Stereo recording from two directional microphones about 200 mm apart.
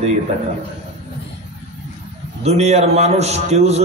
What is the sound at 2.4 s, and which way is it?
A man's voice, 30° right (ahead or behind).